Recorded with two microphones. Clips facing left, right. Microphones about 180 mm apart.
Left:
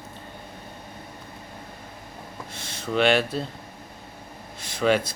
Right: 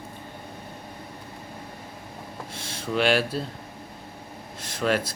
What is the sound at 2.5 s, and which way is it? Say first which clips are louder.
Speech: left 2 dB; 5° right (ahead or behind).